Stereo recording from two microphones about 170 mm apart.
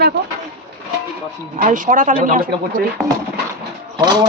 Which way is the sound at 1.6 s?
50° right (ahead or behind).